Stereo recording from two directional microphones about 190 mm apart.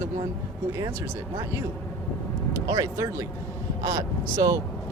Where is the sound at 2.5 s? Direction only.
20° right (ahead or behind).